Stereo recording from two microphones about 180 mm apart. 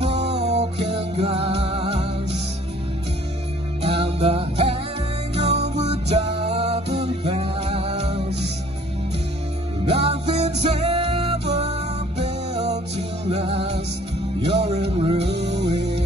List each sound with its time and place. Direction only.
0.0 s music: 35° right (ahead or behind)
3.8 s music: 30° right (ahead or behind)
9.8 s music: 35° right (ahead or behind)